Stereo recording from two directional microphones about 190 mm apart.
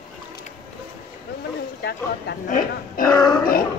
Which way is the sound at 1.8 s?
55° left (ahead or behind).